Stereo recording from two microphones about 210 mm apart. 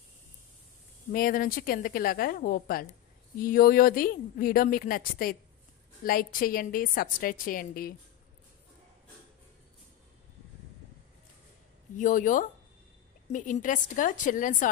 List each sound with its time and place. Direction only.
1.1 s speech: 40° left (ahead or behind)
12.0 s a woman's voice: 40° left (ahead or behind)